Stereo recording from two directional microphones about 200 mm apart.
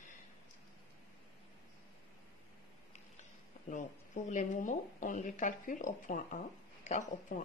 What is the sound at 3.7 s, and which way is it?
A woman's voice, 40° left (ahead or behind).